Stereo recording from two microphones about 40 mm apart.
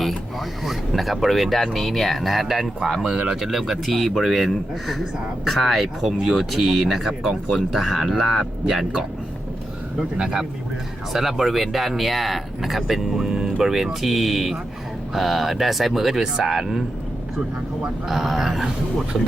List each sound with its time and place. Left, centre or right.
0.3 s speech: centre
18.1 s speech: centre